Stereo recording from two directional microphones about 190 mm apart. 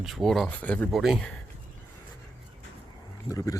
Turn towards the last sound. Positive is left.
turn(degrees=15)  # may be behind; listen again after turning